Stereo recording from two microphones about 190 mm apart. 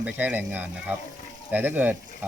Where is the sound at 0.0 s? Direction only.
5° right (ahead or behind).